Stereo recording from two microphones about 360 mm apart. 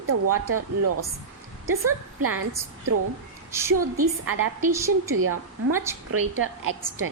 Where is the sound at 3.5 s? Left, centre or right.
Centre.